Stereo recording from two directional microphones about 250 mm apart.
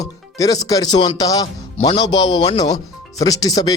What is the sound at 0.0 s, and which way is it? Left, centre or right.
Speech, centre.